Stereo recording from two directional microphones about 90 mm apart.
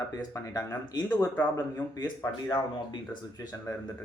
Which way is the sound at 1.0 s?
20° left (ahead or behind).